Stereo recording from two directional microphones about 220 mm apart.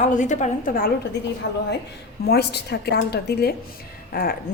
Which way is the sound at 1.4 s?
50° left (ahead or behind).